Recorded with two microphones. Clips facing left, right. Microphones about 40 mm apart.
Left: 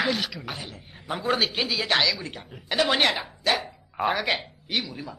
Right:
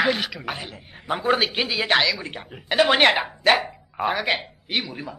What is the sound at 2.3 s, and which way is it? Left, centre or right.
Speech, right.